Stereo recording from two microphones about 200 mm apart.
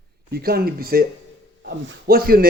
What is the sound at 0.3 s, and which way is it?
Speech, 50° right (ahead or behind).